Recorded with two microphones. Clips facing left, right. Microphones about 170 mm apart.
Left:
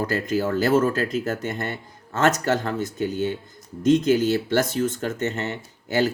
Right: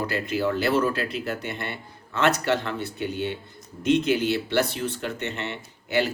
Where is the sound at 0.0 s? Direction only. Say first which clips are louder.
Left 2 dB; 45° left (ahead or behind).